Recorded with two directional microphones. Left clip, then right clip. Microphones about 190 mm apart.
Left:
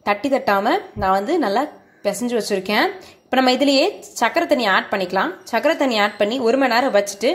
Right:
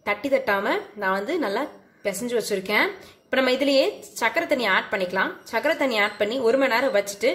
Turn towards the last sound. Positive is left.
turn(degrees=20)  # may be behind; listen again after turning